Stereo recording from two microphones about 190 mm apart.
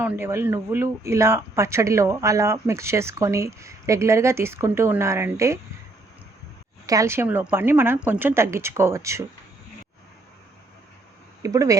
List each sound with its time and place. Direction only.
0.0 s speech: 10° right (ahead or behind)
6.8 s speech: 15° right (ahead or behind)
11.4 s speech: 15° right (ahead or behind)